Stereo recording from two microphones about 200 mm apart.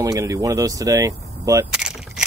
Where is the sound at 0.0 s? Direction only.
15° right (ahead or behind).